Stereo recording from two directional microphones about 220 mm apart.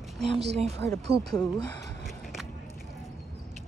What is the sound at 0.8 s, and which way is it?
Speech, 10° left (ahead or behind).